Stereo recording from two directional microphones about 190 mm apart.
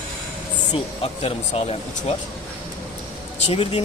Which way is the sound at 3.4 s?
30° left (ahead or behind).